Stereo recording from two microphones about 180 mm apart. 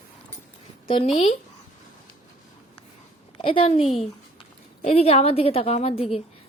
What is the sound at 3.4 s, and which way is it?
A woman's voice, 30° left (ahead or behind).